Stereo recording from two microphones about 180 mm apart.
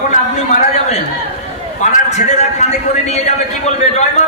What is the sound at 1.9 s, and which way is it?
A man's voice, 40° left (ahead or behind).